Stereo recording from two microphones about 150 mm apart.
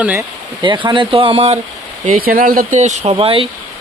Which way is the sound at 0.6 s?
30° right (ahead or behind).